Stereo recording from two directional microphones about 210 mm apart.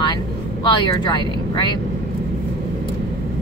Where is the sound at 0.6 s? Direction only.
20° left (ahead or behind).